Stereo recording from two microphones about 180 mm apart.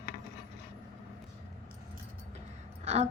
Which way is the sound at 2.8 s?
35° right (ahead or behind).